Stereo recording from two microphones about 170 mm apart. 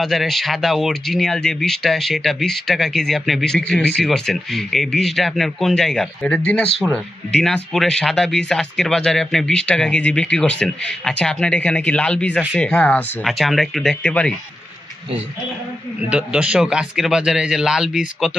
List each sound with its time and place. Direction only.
0.0 s speech: centre (ahead or behind)
16.1 s speech: 5° right (ahead or behind)